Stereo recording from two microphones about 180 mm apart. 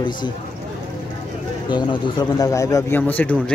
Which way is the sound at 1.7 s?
25° left (ahead or behind).